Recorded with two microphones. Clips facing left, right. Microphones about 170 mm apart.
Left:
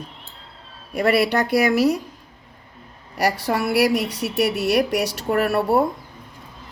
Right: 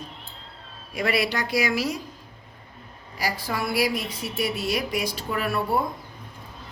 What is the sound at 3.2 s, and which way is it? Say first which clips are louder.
Speech: left 7 dB; 70° left (ahead or behind).